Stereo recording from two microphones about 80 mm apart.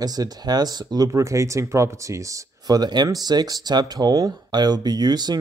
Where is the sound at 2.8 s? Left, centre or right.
Right.